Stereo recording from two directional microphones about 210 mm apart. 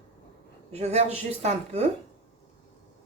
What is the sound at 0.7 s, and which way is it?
Speech, 30° right (ahead or behind).